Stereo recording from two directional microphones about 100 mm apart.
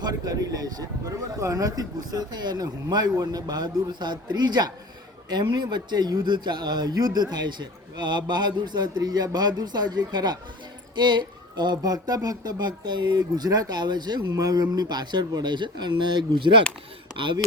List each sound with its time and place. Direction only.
0.0 s a man's voice: 40° right (ahead or behind)